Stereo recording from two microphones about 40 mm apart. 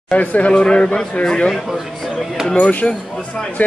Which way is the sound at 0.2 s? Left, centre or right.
Left.